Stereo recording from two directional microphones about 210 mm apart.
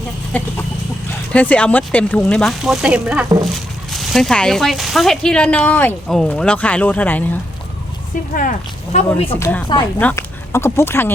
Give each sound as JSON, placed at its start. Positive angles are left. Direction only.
{"t": 0.3, "sound": "speech", "side_deg": 5}
{"t": 8.3, "sound": "speech", "side_deg": 40}
{"t": 9.4, "sound": "speech", "side_deg": 10}